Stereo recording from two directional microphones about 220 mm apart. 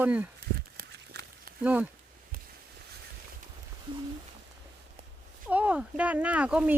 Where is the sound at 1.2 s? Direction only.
50° right (ahead or behind).